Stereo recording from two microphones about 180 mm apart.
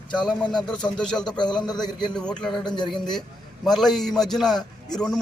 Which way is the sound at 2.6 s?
25° left (ahead or behind).